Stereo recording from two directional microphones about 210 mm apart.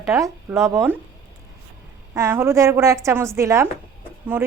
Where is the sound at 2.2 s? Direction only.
15° right (ahead or behind).